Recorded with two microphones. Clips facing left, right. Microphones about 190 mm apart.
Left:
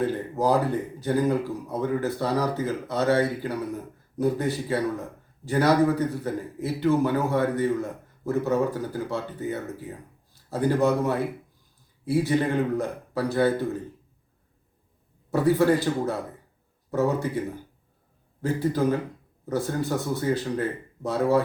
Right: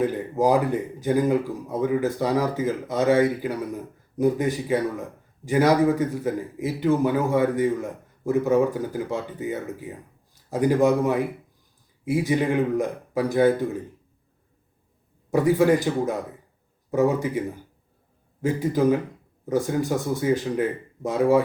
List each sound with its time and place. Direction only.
0.0 s a man's voice: 15° right (ahead or behind)
15.3 s a man's voice: 15° right (ahead or behind)
18.4 s a man's voice: 15° right (ahead or behind)